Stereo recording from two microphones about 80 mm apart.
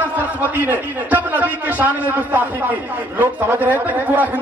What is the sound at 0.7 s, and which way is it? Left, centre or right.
A man's voice, right.